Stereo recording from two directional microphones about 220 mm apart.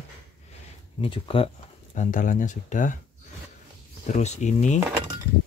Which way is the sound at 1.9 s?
35° left (ahead or behind).